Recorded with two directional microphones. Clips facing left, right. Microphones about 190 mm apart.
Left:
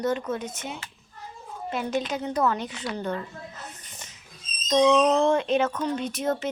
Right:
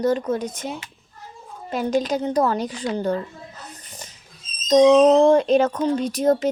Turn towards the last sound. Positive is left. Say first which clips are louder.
# right 8 dB
turn(degrees=-35)  # may be behind; listen again after turning